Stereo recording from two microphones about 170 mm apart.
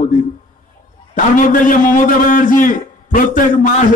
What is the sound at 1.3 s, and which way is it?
A man's voice, 50° left (ahead or behind).